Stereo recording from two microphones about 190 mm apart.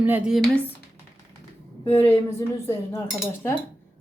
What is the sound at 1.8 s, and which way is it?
Speech, 10° left (ahead or behind).